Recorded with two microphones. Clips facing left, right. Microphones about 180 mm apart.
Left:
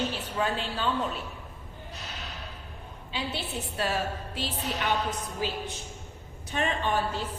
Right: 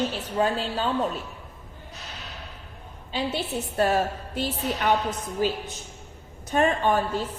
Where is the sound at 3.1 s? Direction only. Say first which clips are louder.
Right 6 dB; 45° right (ahead or behind).